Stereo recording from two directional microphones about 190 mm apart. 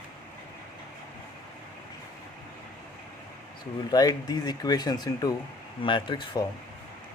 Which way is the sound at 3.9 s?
20° left (ahead or behind).